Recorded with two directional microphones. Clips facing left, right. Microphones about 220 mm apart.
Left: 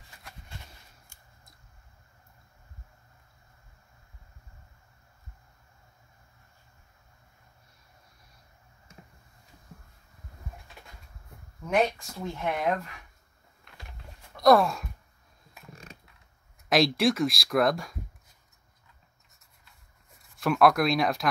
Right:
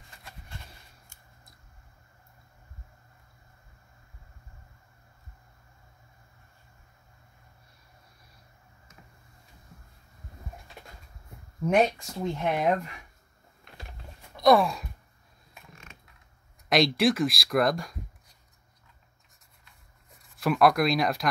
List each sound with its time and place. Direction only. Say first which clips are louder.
8.9 s a sound: left 4 dB; 30° left (ahead or behind)
11.6 s speech: right 3 dB; 20° right (ahead or behind)
14.3 s gasp: even; centre (ahead or behind)
15.7 s mechanisms: left 6 dB; 35° left (ahead or behind)
16.6 s speech: even; centre (ahead or behind)
20.3 s speech: even; centre (ahead or behind)